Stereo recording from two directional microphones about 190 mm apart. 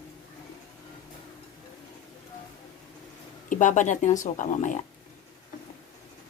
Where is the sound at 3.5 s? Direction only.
45° left (ahead or behind).